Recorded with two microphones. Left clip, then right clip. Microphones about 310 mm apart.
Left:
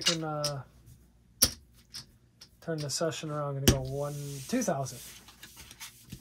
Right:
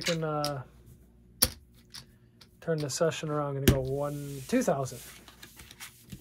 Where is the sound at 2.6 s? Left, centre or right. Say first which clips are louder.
Right 4 dB; right.